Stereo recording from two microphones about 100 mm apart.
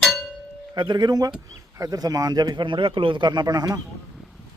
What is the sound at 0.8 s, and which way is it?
Speech, 45° right (ahead or behind).